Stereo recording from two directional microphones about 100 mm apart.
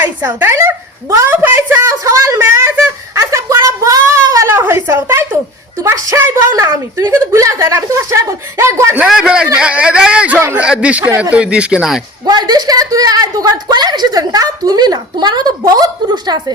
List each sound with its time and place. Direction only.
0.3 s a woman's voice: 25° right (ahead or behind)
1.1 s a sound: 25° right (ahead or behind)
5.8 s a woman's voice: 25° right (ahead or behind)
9.0 s speech: 5° right (ahead or behind)
12.2 s a woman's voice: 45° right (ahead or behind)